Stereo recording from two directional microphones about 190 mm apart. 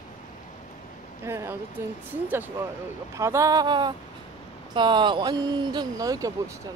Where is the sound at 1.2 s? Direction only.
15° right (ahead or behind).